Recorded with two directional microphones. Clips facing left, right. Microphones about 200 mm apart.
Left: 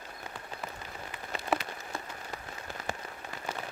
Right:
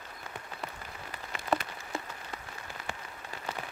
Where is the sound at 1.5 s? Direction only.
25° left (ahead or behind).